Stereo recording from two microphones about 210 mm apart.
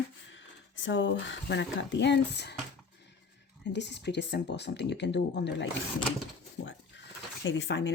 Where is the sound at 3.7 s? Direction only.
55° left (ahead or behind).